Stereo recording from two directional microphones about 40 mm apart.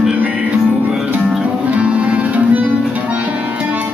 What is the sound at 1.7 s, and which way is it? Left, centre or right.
Music, right.